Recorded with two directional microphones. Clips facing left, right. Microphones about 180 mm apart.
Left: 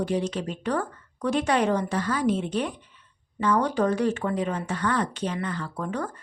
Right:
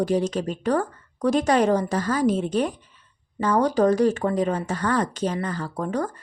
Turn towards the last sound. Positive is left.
turn(degrees=-40)  # may be behind; listen again after turning